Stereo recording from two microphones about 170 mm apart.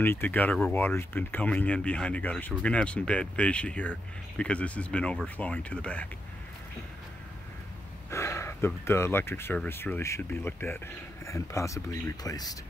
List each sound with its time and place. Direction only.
0.0 s speech: 10° left (ahead or behind)
8.1 s speech: 15° left (ahead or behind)